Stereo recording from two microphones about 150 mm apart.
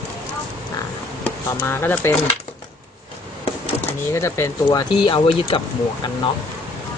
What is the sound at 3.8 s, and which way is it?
Speech, 20° left (ahead or behind).